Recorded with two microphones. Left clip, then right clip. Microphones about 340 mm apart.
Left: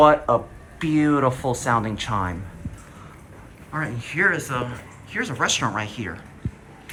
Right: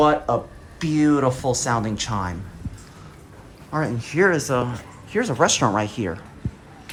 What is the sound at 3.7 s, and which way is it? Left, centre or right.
Speech, centre.